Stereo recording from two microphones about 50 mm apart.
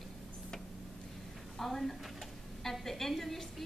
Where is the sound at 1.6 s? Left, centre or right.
Centre.